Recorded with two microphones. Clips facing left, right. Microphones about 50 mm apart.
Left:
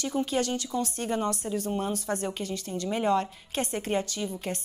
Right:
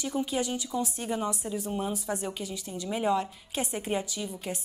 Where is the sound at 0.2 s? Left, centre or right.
Left.